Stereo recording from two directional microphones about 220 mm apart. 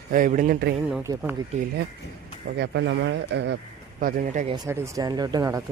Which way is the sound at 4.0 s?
40° right (ahead or behind).